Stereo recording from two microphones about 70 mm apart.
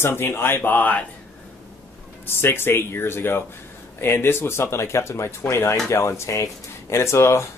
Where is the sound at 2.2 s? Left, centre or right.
Left.